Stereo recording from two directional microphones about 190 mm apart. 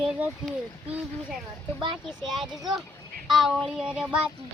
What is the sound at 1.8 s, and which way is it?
Speech, 25° right (ahead or behind).